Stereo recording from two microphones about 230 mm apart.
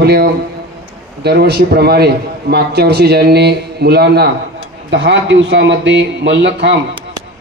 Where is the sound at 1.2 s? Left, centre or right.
Right.